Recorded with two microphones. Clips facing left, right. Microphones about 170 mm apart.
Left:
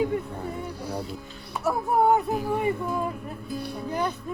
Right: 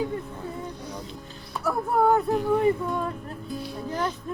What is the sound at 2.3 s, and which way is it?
Music, 5° left (ahead or behind).